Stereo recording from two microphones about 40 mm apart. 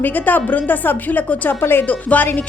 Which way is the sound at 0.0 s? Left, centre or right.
Left.